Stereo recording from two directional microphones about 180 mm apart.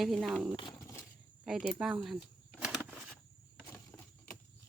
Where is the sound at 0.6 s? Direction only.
20° left (ahead or behind).